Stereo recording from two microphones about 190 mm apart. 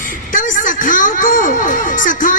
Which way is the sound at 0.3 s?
45° left (ahead or behind).